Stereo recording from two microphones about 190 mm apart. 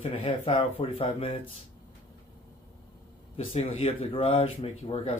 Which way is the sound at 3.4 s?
30° left (ahead or behind).